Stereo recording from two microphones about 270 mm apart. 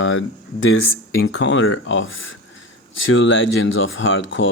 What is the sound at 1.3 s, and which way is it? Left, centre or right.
Speech, left.